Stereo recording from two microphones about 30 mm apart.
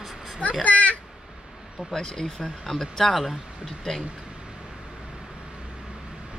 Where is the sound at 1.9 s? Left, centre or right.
Left.